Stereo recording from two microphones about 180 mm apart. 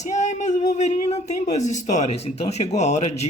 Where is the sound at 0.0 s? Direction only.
40° left (ahead or behind).